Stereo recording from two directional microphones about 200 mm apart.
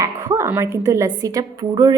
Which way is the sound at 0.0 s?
15° right (ahead or behind).